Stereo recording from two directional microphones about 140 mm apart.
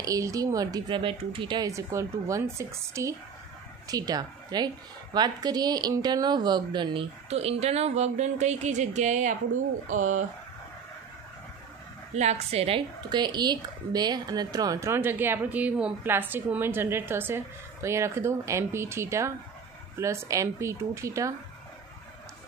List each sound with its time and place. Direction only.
0.0 s a woman's voice: 25° right (ahead or behind)
1.7 s a woman's voice: 20° right (ahead or behind); by 10.2 s 65° right (ahead or behind)
12.1 s a woman's voice: 55° right (ahead or behind); by 21.4 s 20° right (ahead or behind)